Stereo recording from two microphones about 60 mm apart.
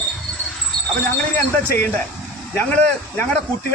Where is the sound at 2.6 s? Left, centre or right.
Left.